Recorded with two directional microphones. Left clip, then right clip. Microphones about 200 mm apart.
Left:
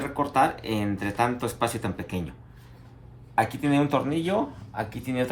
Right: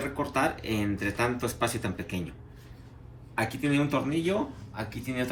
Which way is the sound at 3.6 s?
50° left (ahead or behind).